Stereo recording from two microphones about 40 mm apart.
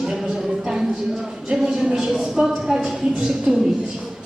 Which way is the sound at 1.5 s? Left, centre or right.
Right.